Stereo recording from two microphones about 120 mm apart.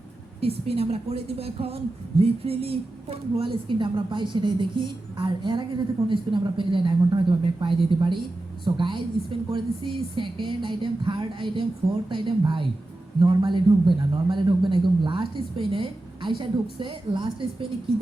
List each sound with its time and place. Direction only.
0.3 s a woman's voice: 55° right (ahead or behind)